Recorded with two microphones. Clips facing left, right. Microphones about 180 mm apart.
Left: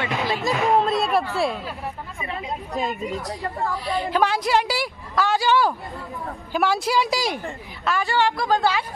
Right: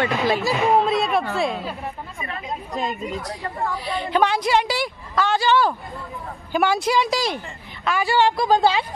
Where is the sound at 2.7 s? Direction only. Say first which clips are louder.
Even; centre (ahead or behind).